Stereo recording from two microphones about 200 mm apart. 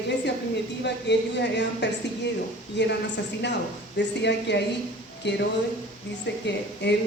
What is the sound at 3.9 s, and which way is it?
A woman's voice, 60° left (ahead or behind).